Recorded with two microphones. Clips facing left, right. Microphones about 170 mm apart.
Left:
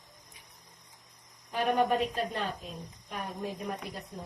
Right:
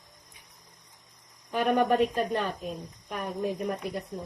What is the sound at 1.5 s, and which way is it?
A woman's voice, 60° right (ahead or behind).